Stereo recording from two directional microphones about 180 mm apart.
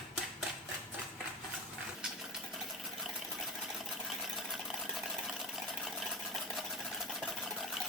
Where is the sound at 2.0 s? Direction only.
5° right (ahead or behind).